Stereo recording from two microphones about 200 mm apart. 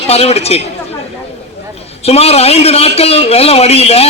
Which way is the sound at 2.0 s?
30° left (ahead or behind).